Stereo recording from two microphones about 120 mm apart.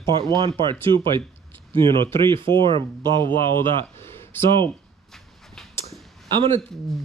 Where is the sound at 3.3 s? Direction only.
20° left (ahead or behind).